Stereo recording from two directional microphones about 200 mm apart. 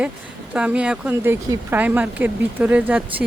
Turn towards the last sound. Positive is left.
turn(degrees=-5)  # may be behind; listen again after turning